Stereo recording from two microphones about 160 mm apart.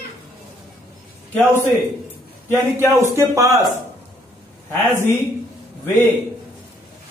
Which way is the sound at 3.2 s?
20° right (ahead or behind).